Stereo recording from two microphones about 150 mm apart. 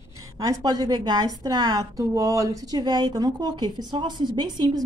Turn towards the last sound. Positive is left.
turn(degrees=-25)  # may be behind; listen again after turning